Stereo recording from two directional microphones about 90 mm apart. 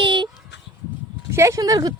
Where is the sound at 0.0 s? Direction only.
65° right (ahead or behind).